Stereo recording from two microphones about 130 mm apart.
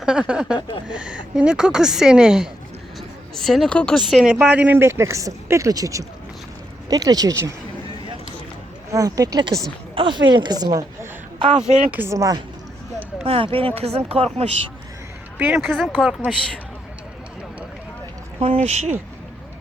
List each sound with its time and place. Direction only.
0.0 s a woman's voice: 5° right (ahead or behind); by 7.5 s 25° right (ahead or behind)
8.9 s speech: 25° right (ahead or behind)
9.9 s speech: 40° right (ahead or behind)
11.3 s speech: 50° right (ahead or behind)
11.7 s speech: 15° right (ahead or behind)
13.2 s speech: 45° right (ahead or behind)
15.4 s speech: 10° right (ahead or behind)
15.6 s a woman's voice: centre (ahead or behind)
18.3 s speech: 50° right (ahead or behind)